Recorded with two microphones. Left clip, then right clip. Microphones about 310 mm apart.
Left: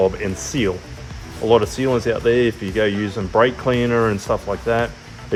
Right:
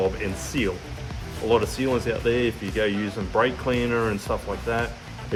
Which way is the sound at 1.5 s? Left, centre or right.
Left.